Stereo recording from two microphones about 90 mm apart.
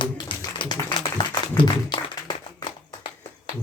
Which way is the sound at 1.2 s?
55° left (ahead or behind).